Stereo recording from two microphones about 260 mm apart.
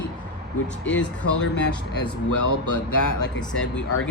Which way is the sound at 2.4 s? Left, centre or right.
Left.